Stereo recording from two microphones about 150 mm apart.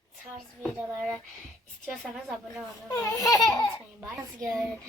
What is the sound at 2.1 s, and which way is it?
Child singing, centre (ahead or behind).